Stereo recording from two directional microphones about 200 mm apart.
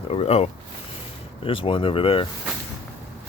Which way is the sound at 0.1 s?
30° left (ahead or behind).